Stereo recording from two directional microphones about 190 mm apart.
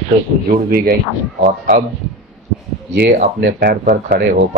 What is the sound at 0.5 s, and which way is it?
Speech, 50° right (ahead or behind).